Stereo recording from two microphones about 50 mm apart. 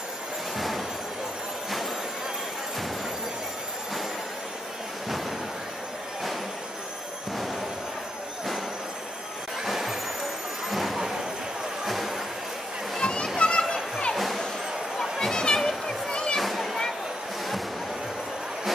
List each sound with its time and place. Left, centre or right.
0.6 s train: centre
9.7 s vehicle: centre
10.7 s a sound: centre
11.8 s music: centre
12.9 s a sound: centre
13.4 s children playing: centre
14.1 s music: centre
15.0 s a sound: centre
16.3 s children playing: centre